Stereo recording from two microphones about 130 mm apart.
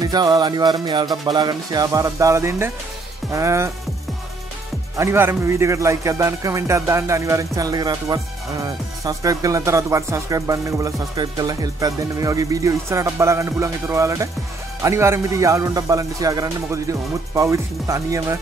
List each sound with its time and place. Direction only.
0.0 s music: 30° right (ahead or behind)
1.2 s speech: 35° right (ahead or behind)
4.9 s speech: 20° right (ahead or behind)